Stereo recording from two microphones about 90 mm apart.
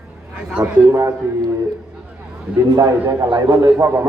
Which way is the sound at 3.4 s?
40° right (ahead or behind).